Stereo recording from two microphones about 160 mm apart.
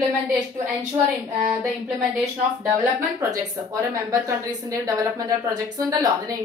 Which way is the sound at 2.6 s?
15° right (ahead or behind).